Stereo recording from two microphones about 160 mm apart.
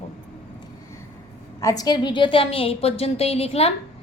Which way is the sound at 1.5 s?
20° left (ahead or behind).